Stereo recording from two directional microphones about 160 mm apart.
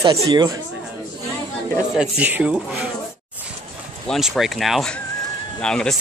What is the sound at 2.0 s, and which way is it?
Speech, 10° right (ahead or behind).